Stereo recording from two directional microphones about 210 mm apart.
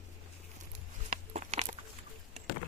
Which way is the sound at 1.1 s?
35° right (ahead or behind).